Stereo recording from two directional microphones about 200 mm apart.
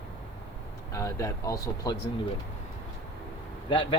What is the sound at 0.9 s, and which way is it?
Speech, 15° left (ahead or behind).